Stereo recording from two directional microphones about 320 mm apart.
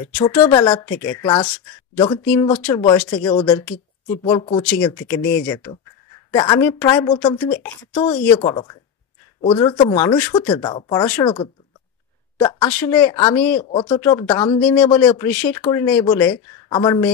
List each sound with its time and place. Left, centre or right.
0.3 s speech: centre